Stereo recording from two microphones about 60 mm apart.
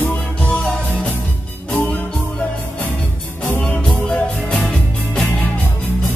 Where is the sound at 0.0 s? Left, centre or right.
Left.